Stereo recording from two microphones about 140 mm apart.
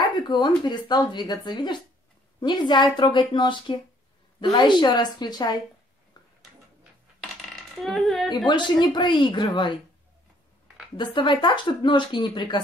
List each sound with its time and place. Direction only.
0.1 s speech: 30° left (ahead or behind)
7.4 s a sound: centre (ahead or behind)
8.5 s speech: 35° left (ahead or behind)
11.0 s speech: 35° left (ahead or behind)